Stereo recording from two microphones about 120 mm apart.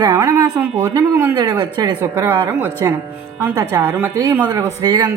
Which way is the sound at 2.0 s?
20° right (ahead or behind).